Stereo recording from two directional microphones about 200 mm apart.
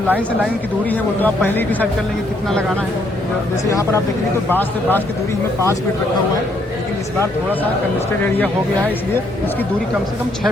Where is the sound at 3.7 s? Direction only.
15° left (ahead or behind).